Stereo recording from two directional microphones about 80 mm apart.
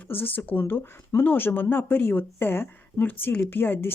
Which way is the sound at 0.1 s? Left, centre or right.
Left.